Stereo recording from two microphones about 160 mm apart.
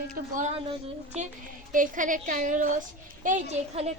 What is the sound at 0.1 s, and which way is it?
Speech, 50° right (ahead or behind).